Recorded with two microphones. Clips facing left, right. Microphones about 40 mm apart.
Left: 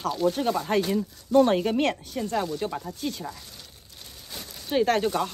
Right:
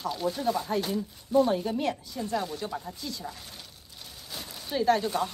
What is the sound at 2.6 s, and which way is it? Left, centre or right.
Speech, left.